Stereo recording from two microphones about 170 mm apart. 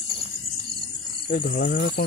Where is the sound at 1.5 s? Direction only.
60° left (ahead or behind).